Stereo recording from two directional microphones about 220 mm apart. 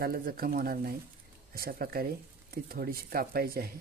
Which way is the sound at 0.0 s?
45° right (ahead or behind).